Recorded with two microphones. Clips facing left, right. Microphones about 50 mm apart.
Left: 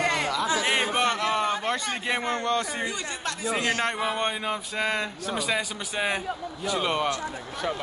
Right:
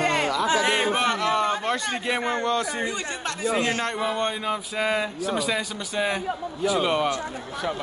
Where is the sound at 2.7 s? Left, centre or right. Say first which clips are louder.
Right 2 dB; right.